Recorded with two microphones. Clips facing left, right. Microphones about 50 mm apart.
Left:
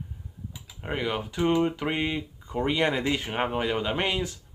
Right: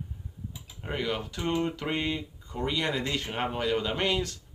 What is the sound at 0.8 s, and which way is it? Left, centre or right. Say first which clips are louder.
Speech: left 2 dB; centre.